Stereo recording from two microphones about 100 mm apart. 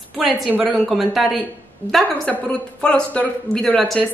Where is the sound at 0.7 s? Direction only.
Centre (ahead or behind).